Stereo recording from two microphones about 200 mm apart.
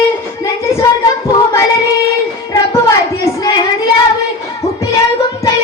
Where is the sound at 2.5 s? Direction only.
15° left (ahead or behind).